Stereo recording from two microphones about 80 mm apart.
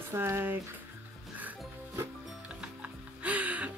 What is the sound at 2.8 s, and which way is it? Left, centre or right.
Music, centre.